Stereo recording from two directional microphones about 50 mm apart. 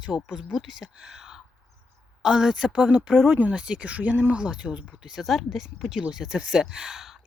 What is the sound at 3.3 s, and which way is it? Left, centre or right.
Speech, right.